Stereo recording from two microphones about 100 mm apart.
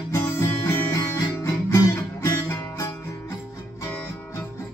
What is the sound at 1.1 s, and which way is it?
Guitar, 35° left (ahead or behind).